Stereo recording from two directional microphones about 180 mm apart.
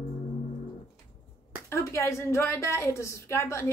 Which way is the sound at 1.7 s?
15° left (ahead or behind).